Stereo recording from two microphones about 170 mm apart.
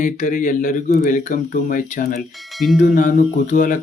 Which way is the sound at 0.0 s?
50° left (ahead or behind).